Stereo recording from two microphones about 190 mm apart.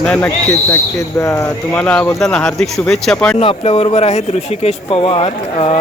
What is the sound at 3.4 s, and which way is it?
Speech, 30° left (ahead or behind).